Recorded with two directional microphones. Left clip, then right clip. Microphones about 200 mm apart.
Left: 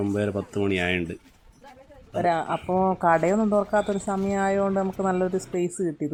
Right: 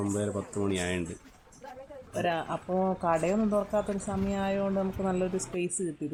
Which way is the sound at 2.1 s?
10° left (ahead or behind).